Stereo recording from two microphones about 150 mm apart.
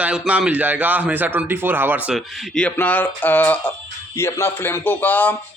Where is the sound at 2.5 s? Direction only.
10° left (ahead or behind).